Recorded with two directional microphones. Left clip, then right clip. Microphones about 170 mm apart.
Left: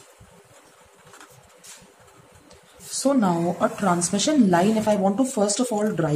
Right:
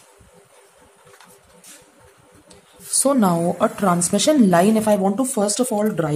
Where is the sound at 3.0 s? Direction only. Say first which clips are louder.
Right 3 dB; 45° right (ahead or behind).